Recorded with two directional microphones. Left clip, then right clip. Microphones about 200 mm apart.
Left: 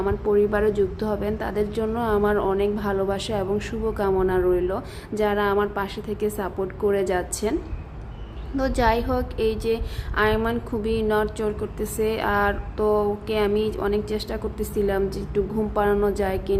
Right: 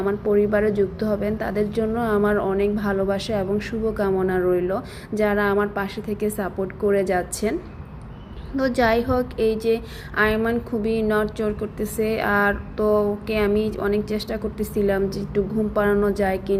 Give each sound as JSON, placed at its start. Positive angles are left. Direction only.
{"t": 0.0, "sound": "a woman's voice", "side_deg": -5}
{"t": 8.5, "sound": "a woman's voice", "side_deg": -10}